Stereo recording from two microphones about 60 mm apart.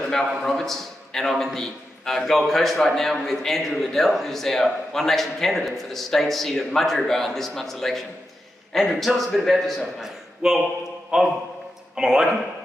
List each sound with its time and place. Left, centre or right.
0.4 s a man's voice: centre